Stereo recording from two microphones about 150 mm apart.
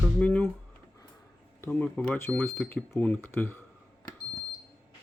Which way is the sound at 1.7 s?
5° left (ahead or behind).